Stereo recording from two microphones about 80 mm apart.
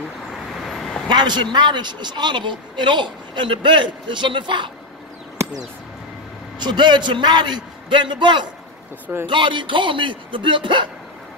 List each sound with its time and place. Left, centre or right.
0.7 s vehicle: centre
1.0 s a man's voice: right
6.6 s a man's voice: right
9.0 s speech: right
9.3 s speech: right